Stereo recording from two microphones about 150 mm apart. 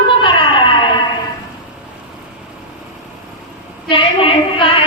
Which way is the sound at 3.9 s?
35° left (ahead or behind).